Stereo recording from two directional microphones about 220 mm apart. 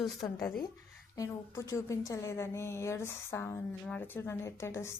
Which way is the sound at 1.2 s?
15° left (ahead or behind).